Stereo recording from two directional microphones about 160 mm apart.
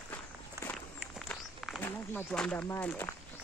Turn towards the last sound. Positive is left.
turn(degrees=10)  # may be behind; listen again after turning